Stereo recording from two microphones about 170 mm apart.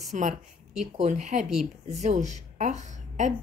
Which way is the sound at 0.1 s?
45° right (ahead or behind).